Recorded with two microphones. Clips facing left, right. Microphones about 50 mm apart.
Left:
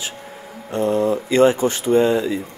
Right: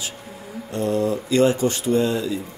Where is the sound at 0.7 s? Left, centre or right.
Centre.